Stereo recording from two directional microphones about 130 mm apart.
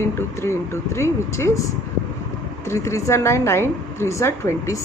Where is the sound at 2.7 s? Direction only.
20° left (ahead or behind).